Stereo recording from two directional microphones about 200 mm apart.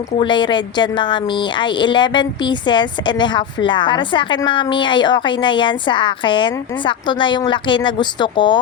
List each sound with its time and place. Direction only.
0.2 s a woman's voice: 25° left (ahead or behind)